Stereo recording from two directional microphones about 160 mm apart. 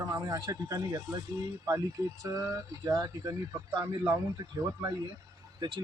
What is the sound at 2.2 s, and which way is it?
Speech, 20° right (ahead or behind).